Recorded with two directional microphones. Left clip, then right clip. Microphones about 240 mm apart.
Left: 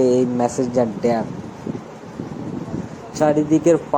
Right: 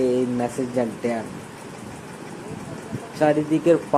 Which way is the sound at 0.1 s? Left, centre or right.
Centre.